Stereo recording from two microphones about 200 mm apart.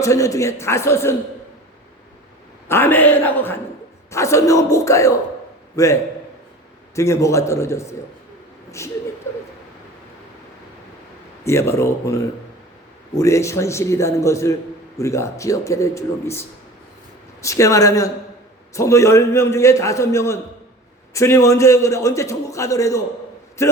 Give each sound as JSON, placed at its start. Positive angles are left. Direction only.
{"t": 0.0, "sound": "a man's voice", "side_deg": 15}
{"t": 2.6, "sound": "a man's voice", "side_deg": 10}
{"t": 11.4, "sound": "a man's voice", "side_deg": 15}